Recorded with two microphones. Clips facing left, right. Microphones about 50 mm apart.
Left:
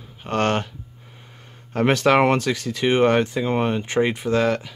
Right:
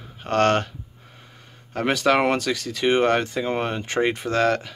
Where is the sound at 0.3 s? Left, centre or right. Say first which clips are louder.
Right 2 dB; centre.